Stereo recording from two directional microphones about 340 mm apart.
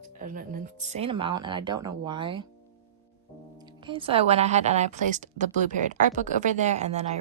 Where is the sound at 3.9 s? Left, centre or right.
Centre.